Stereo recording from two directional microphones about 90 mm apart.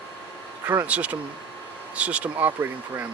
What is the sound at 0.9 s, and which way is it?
Speech, 15° right (ahead or behind).